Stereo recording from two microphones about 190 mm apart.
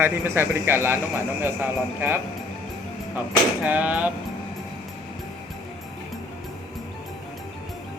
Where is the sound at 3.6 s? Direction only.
10° right (ahead or behind).